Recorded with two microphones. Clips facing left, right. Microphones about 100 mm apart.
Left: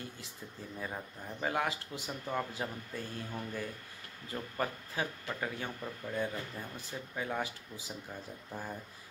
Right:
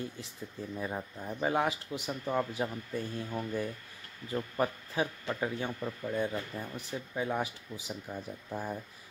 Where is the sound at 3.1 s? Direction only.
20° right (ahead or behind).